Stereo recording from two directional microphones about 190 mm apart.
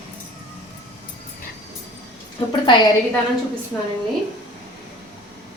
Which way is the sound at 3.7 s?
10° left (ahead or behind).